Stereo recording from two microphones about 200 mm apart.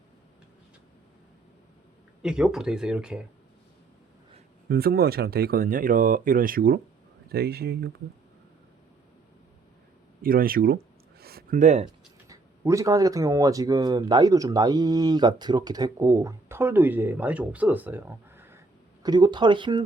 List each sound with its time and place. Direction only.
2.2 s speech: 5° right (ahead or behind)
4.7 s speech: 50° right (ahead or behind)
10.2 s speech: 45° right (ahead or behind)
11.2 s a sound: 50° right (ahead or behind)
12.3 s speech: 15° right (ahead or behind)